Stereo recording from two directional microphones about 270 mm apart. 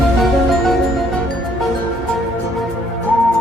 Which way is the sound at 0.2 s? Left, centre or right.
Centre.